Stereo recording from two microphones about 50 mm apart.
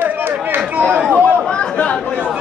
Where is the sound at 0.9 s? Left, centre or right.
Right.